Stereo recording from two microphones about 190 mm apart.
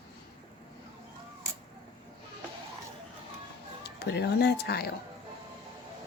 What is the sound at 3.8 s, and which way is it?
Speech, 60° left (ahead or behind).